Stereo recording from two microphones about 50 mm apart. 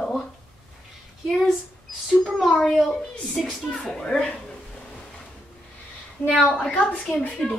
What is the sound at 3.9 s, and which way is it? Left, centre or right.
Speech, centre.